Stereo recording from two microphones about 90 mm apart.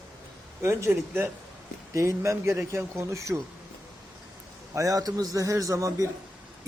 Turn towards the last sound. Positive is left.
turn(degrees=-40)  # may be behind; listen again after turning